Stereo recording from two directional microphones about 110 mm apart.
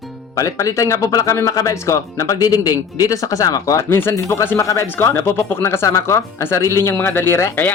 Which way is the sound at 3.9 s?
20° left (ahead or behind).